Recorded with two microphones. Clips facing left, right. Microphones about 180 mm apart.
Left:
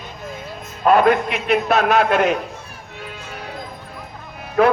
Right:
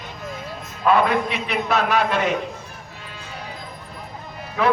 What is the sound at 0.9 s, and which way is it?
A man's voice, 50° left (ahead or behind).